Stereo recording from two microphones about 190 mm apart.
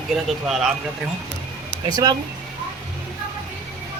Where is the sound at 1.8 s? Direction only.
20° right (ahead or behind).